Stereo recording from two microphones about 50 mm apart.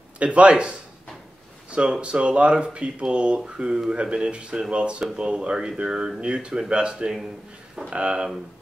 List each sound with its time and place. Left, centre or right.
0.2 s speech: right